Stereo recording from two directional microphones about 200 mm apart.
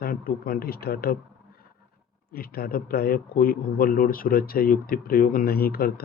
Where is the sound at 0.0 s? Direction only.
45° left (ahead or behind).